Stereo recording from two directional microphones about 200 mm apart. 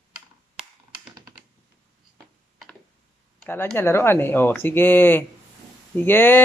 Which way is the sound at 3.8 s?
10° left (ahead or behind).